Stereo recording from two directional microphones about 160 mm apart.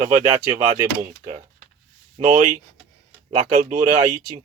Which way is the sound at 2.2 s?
50° right (ahead or behind).